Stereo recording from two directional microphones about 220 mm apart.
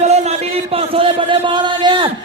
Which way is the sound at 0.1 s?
30° right (ahead or behind).